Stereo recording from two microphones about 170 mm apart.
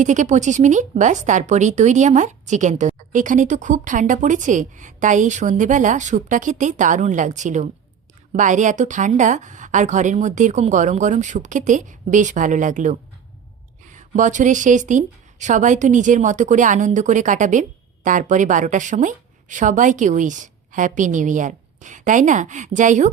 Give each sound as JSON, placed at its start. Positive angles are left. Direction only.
{"t": 0.0, "sound": "a woman's voice", "side_deg": -45}